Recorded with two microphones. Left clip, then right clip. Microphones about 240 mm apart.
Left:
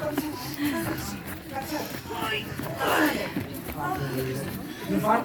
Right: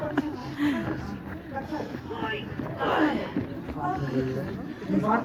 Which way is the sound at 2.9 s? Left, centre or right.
Left.